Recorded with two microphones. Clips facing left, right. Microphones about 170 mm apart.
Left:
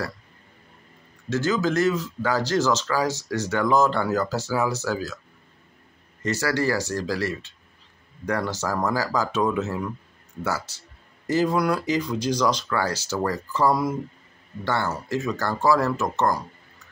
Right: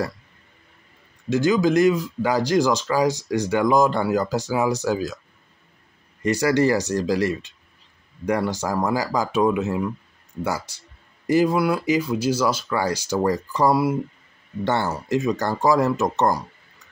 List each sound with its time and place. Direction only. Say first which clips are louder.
1.3 s speech: right 5 dB; 15° right (ahead or behind)
6.2 s speech: right 5 dB; 15° right (ahead or behind)
14.6 s speech: right 3 dB; 20° right (ahead or behind)